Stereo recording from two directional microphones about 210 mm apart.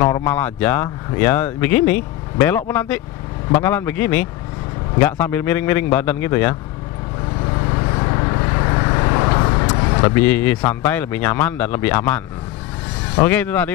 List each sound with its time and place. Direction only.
0.0 s speech: 15° left (ahead or behind)
7.7 s vehicle: 20° left (ahead or behind)
10.7 s speech: 10° left (ahead or behind)